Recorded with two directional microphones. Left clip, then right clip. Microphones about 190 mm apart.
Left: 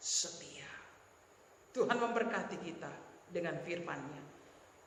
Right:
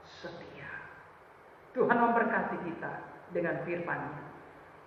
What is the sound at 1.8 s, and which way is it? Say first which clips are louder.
A man's voice: right 7 dB; 60° left (ahead or behind).